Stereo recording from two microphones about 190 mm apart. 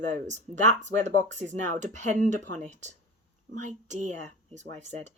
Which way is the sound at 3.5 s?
40° right (ahead or behind).